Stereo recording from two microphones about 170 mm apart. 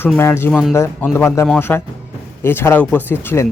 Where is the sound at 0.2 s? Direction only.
15° left (ahead or behind).